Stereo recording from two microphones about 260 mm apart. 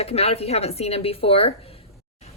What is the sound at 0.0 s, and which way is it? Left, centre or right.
A woman's voice, left.